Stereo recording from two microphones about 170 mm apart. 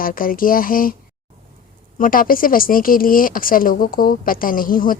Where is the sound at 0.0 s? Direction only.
55° left (ahead or behind).